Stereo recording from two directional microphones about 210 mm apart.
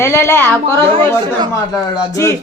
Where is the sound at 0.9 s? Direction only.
25° right (ahead or behind).